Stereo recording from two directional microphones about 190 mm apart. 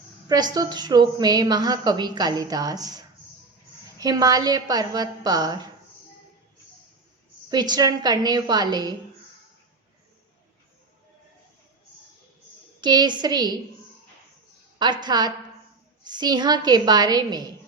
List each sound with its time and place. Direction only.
0.3 s a woman's voice: 20° right (ahead or behind)
7.5 s a woman's voice: 20° right (ahead or behind)
12.8 s a woman's voice: 20° right (ahead or behind)
14.8 s a woman's voice: 20° right (ahead or behind)